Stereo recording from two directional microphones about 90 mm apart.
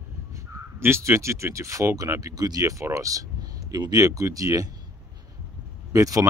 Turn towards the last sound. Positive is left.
turn(degrees=-40)  # may be behind; listen again after turning